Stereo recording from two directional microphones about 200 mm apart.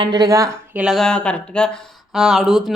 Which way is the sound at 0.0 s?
20° right (ahead or behind).